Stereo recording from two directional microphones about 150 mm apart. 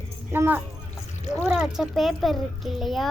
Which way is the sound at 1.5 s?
5° right (ahead or behind).